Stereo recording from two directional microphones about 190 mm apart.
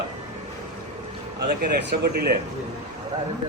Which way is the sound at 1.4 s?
60° right (ahead or behind).